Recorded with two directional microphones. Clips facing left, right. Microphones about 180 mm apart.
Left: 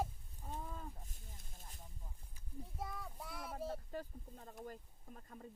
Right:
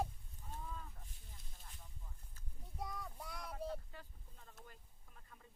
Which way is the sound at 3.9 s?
40° left (ahead or behind).